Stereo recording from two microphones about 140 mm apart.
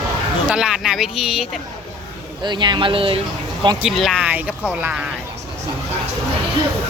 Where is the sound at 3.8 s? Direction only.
Centre (ahead or behind).